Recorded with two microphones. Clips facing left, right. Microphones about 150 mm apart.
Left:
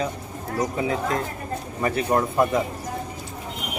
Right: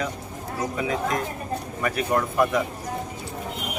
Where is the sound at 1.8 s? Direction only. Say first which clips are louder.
Left 3 dB; 25° left (ahead or behind).